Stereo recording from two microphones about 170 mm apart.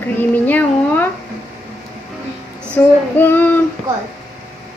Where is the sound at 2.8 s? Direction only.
10° left (ahead or behind).